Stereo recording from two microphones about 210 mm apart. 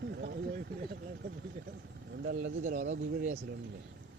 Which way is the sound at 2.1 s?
50° right (ahead or behind).